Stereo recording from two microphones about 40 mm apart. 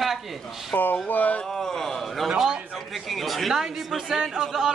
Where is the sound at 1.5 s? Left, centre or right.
Centre.